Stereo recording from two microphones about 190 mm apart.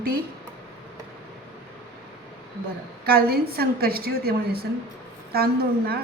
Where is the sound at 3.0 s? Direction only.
55° right (ahead or behind).